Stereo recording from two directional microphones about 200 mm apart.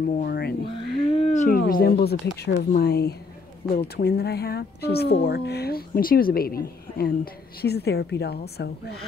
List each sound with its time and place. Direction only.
0.1 s a woman's voice: 50° left (ahead or behind)
0.7 s a sound: 30° left (ahead or behind); by 2.1 s 50° left (ahead or behind)
2.4 s a woman's voice: 55° left (ahead or behind)